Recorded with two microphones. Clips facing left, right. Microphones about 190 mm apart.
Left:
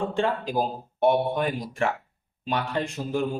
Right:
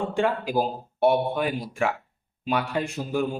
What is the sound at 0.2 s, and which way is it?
Speech, 10° right (ahead or behind).